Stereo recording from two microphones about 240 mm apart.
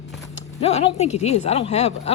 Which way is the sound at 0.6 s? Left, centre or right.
Left.